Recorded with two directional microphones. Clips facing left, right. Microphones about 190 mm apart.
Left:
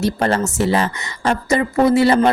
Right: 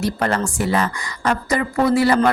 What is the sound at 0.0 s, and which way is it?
A woman's voice, 30° left (ahead or behind).